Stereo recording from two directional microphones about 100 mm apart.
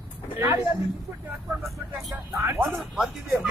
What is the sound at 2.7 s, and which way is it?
Speech, centre (ahead or behind).